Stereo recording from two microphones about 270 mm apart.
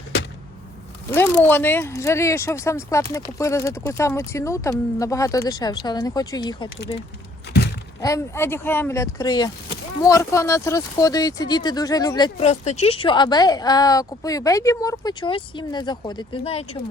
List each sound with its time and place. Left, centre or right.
1.5 s speech: centre
7.5 s a sound: left
8.0 s speech: centre